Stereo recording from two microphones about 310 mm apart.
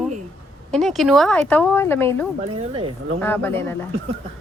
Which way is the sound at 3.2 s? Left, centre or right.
Centre.